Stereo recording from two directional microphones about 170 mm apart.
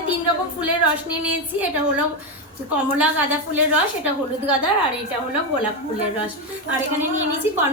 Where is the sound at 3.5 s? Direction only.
10° right (ahead or behind).